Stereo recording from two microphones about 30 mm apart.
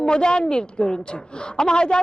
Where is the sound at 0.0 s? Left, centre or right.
Left.